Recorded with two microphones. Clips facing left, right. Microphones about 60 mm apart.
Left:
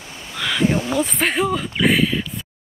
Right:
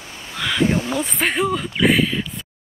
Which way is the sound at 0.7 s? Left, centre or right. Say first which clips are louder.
Left 1 dB; left.